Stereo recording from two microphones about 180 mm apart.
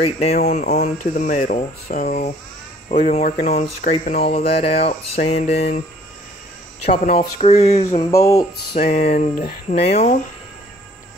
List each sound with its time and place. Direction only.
0.0 s speech: 40° left (ahead or behind)
7.2 s speech: 35° left (ahead or behind)
8.1 s speech: 20° left (ahead or behind)
8.7 s speech: 40° left (ahead or behind)